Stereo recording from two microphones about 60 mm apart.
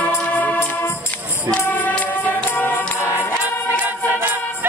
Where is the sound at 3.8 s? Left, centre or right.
Right.